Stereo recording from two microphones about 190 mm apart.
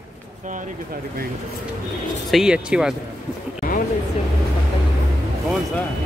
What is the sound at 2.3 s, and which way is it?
Speech, 5° right (ahead or behind).